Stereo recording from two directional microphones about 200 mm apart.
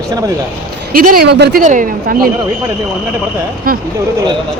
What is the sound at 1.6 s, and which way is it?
Speech, 40° right (ahead or behind).